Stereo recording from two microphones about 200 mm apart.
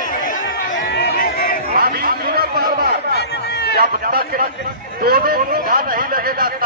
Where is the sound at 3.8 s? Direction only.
50° right (ahead or behind).